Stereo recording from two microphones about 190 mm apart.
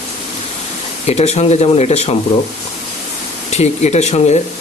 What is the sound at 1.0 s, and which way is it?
Speech, 35° left (ahead or behind).